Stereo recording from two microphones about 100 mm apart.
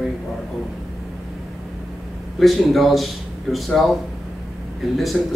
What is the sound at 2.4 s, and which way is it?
Speech, centre (ahead or behind).